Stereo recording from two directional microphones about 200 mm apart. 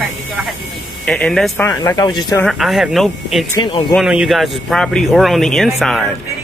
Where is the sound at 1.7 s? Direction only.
15° left (ahead or behind).